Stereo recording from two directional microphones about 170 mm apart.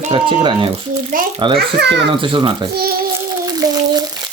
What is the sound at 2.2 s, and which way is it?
Speech, 30° right (ahead or behind).